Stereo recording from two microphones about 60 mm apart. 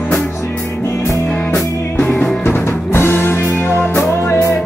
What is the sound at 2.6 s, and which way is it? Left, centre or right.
Music, left.